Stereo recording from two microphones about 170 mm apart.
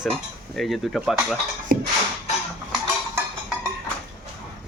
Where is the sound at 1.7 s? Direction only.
60° right (ahead or behind).